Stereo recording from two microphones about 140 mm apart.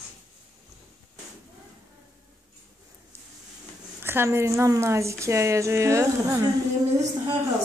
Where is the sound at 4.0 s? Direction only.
15° right (ahead or behind).